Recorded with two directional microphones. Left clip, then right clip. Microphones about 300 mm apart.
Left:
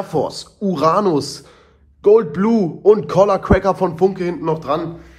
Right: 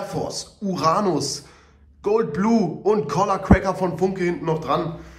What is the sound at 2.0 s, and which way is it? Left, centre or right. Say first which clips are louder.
A man's voice: left 8 dB; centre.